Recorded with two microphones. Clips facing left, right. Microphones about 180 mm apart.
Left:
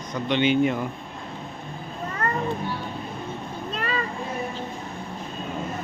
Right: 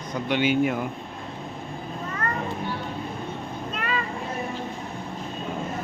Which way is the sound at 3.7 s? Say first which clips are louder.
Left 1 dB; 35° left (ahead or behind).